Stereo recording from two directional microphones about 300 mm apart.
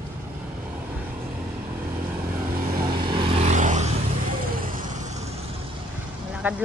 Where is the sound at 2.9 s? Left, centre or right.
Centre.